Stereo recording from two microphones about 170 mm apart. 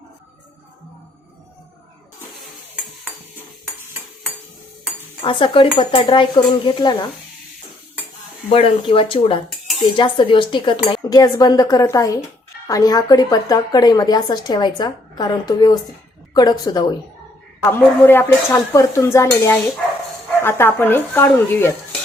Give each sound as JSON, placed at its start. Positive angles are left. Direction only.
{"t": 5.2, "sound": "a woman's voice", "side_deg": 30}
{"t": 8.5, "sound": "a woman's voice", "side_deg": 30}
{"t": 17.6, "sound": "speech", "side_deg": 15}